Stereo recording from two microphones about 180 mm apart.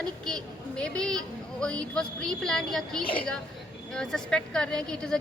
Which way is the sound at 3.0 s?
30° left (ahead or behind).